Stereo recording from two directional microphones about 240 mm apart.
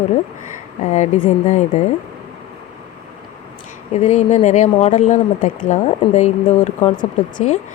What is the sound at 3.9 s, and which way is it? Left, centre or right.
Speech, left.